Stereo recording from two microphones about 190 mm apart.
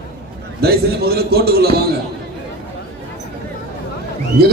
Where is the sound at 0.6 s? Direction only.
55° right (ahead or behind).